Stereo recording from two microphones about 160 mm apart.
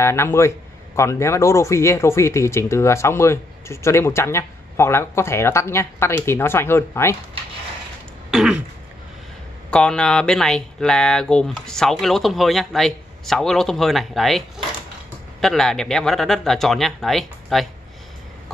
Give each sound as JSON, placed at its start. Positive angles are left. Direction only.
{"t": 0.0, "sound": "speech", "side_deg": 15}
{"t": 8.3, "sound": "throat clearing", "side_deg": -5}
{"t": 9.7, "sound": "speech", "side_deg": 5}
{"t": 15.4, "sound": "speech", "side_deg": 5}